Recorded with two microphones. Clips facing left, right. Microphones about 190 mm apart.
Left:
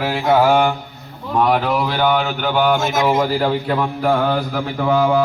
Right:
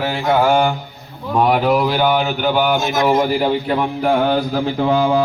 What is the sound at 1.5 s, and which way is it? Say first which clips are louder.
A man's voice: right 3 dB; 10° right (ahead or behind).